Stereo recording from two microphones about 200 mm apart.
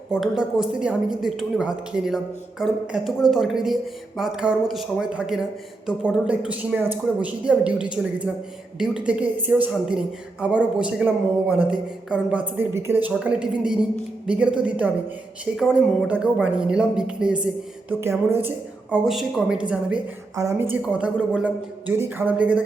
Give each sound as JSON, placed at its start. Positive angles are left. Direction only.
{"t": 0.1, "sound": "a woman's voice", "side_deg": 0}
{"t": 20.3, "sound": "a woman's voice", "side_deg": -15}